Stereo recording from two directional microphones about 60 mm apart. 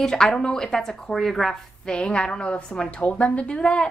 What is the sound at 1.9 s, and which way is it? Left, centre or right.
A woman's voice, centre.